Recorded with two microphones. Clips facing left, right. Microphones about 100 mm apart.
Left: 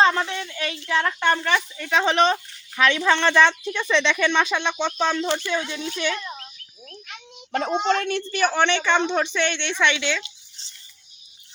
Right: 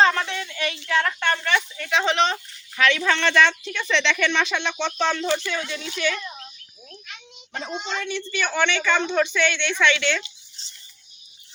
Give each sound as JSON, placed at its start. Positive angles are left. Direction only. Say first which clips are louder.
{"t": 0.0, "sound": "a sound", "louder": "even", "side_deg": 20}
{"t": 2.3, "sound": "speech", "louder": "left 4 dB", "side_deg": 20}
{"t": 7.5, "sound": "a woman's voice", "louder": "left 8 dB", "side_deg": 65}